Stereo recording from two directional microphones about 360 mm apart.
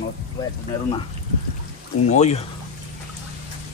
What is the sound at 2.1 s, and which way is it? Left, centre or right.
Speech, centre.